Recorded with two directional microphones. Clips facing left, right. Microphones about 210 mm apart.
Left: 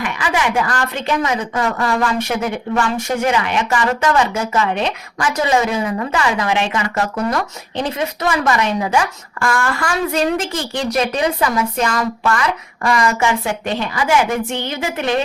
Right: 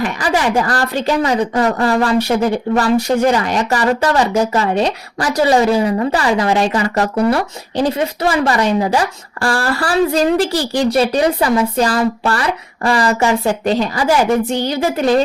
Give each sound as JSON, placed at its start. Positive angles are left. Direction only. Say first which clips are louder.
{"t": 0.0, "sound": "a woman's voice", "louder": "right 3 dB", "side_deg": -40}